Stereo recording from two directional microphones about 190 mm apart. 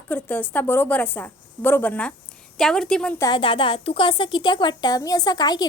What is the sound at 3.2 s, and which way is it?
A woman's voice, 25° left (ahead or behind).